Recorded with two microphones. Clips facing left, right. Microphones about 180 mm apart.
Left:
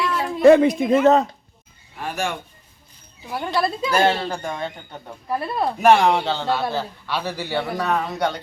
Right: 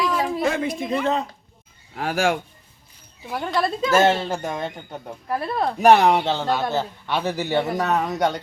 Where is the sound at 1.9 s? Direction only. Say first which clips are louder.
Right 5 dB; 90° right.